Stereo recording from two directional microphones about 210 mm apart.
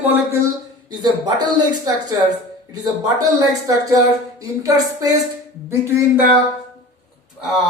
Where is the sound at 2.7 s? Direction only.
15° right (ahead or behind).